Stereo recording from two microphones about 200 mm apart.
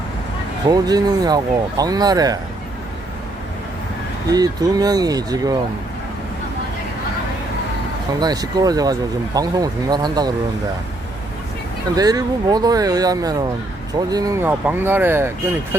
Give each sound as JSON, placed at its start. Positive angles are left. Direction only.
{"t": 0.7, "sound": "speech", "side_deg": -20}
{"t": 4.3, "sound": "speech", "side_deg": -20}
{"t": 8.2, "sound": "speech", "side_deg": -20}
{"t": 11.9, "sound": "speech", "side_deg": -20}